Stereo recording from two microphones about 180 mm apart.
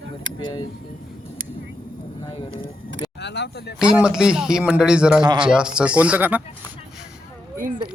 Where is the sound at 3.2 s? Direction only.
70° left (ahead or behind).